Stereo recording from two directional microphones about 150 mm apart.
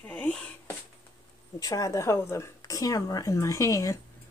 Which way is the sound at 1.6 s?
20° left (ahead or behind).